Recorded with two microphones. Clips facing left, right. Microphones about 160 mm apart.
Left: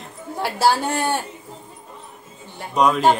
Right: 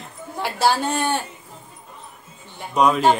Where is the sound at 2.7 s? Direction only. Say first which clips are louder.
Even; centre (ahead or behind).